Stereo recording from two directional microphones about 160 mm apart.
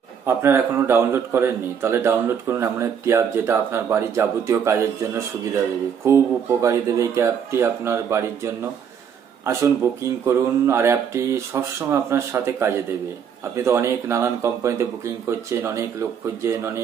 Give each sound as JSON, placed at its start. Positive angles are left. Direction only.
{"t": 0.3, "sound": "speech", "side_deg": -15}
{"t": 9.8, "sound": "speech", "side_deg": -15}